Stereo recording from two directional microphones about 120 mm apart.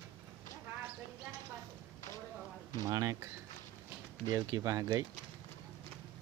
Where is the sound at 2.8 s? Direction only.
30° right (ahead or behind).